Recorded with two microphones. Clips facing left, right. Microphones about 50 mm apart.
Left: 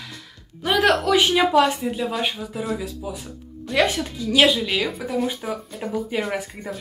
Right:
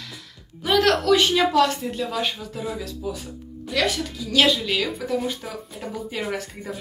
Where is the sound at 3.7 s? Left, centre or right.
Left.